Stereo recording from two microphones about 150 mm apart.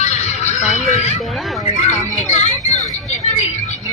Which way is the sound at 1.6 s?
45° left (ahead or behind).